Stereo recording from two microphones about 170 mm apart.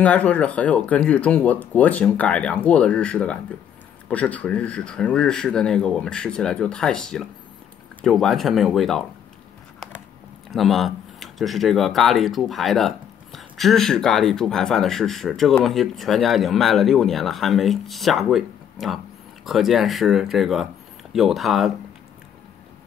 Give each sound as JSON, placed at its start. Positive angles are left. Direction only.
{"t": 0.0, "sound": "speech", "side_deg": 10}
{"t": 10.5, "sound": "speech", "side_deg": 0}